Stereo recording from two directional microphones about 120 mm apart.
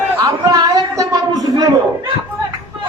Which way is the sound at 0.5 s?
30° right (ahead or behind).